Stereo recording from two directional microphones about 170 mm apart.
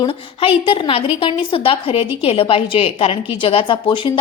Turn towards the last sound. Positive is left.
turn(degrees=30)  # may be behind; listen again after turning